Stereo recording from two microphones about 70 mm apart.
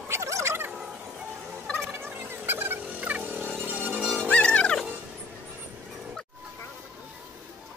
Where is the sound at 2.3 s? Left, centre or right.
Right.